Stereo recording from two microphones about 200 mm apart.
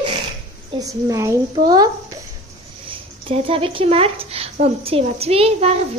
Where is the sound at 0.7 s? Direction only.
15° right (ahead or behind).